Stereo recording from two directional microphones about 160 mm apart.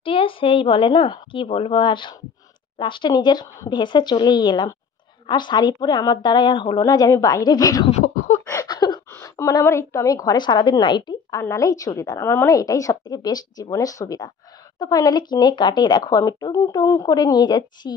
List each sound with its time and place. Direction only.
0.0 s a woman's voice: 35° left (ahead or behind)
8.5 s a sound: 25° left (ahead or behind)
9.1 s a woman's voice: 20° left (ahead or behind)